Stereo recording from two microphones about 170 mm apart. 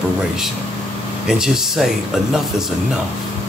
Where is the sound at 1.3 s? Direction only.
Centre (ahead or behind).